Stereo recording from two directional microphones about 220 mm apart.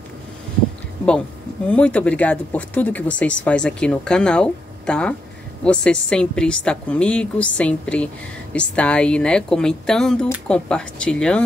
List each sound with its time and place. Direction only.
1.7 s speech: 5° left (ahead or behind)